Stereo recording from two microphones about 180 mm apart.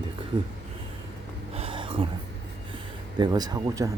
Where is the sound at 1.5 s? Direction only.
30° right (ahead or behind).